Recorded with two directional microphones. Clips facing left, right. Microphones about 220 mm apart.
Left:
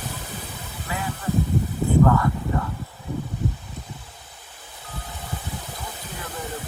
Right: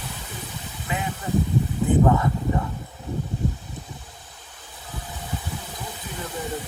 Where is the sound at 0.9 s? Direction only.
20° right (ahead or behind).